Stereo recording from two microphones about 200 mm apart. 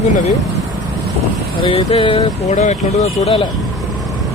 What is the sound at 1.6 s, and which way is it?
Speech, 25° left (ahead or behind).